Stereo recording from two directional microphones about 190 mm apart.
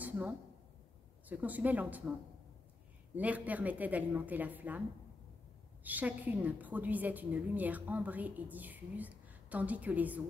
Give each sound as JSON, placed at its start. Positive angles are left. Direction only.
{"t": 0.0, "sound": "a sound", "side_deg": -10}
{"t": 1.3, "sound": "a woman's voice", "side_deg": -10}
{"t": 3.2, "sound": "a woman's voice", "side_deg": -10}
{"t": 5.9, "sound": "a woman's voice", "side_deg": -10}